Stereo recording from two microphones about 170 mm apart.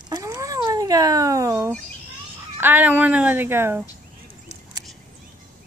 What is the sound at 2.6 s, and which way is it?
Speech, 10° right (ahead or behind).